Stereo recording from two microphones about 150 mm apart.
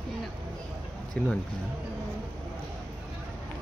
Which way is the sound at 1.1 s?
5° left (ahead or behind).